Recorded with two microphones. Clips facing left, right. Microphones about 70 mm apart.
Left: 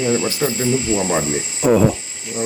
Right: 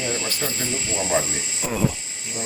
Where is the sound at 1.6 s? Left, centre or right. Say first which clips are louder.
Left 14 dB; left.